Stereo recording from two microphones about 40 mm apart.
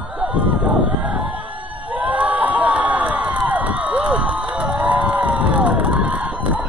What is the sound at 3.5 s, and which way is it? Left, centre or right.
Crowd, right.